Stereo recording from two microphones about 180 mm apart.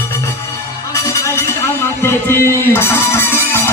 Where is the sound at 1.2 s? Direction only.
15° left (ahead or behind).